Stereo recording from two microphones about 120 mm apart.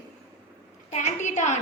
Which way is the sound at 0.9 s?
75° left (ahead or behind).